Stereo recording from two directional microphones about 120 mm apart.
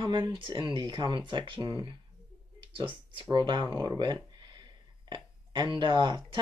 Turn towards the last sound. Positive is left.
turn(degrees=-40)  # may be behind; listen again after turning